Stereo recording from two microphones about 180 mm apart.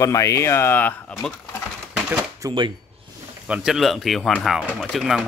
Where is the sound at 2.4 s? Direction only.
20° right (ahead or behind).